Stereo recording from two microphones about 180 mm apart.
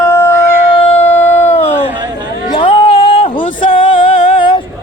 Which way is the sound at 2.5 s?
30° left (ahead or behind).